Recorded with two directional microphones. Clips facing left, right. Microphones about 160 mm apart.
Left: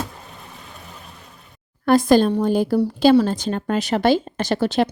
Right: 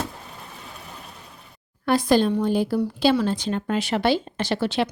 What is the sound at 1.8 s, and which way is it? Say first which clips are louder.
A woman's voice: left 4 dB; 45° left (ahead or behind).